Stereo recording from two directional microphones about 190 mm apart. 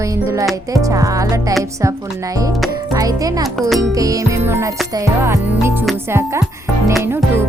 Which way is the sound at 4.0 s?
20° right (ahead or behind).